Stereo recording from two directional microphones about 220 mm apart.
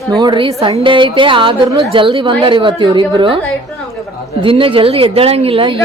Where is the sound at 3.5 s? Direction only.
Centre (ahead or behind).